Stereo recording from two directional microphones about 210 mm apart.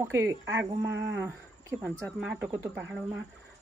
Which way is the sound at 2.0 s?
Centre (ahead or behind).